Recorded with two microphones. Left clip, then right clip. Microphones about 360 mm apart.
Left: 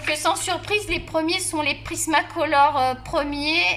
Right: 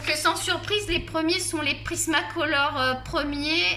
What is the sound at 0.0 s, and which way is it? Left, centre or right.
A woman's voice, centre.